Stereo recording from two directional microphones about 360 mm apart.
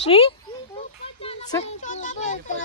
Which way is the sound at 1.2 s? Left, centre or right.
Centre.